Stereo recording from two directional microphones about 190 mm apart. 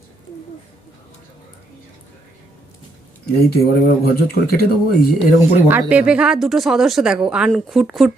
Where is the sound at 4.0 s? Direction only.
55° left (ahead or behind).